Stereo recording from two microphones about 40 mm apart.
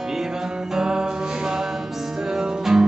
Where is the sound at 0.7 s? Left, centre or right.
Centre.